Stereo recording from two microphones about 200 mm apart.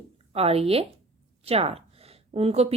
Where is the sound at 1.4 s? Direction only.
30° right (ahead or behind).